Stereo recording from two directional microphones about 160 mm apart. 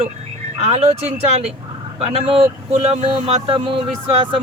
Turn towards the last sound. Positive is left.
turn(degrees=-30)  # may be behind; listen again after turning